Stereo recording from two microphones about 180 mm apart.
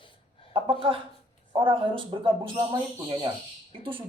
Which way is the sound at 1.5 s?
30° right (ahead or behind).